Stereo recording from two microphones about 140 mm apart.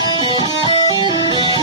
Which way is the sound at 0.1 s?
35° left (ahead or behind).